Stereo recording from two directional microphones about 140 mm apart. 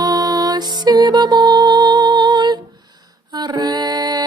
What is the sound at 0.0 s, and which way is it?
Music, 30° right (ahead or behind).